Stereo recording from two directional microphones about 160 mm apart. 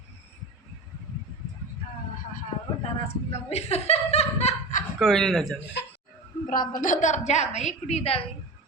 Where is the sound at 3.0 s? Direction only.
40° left (ahead or behind).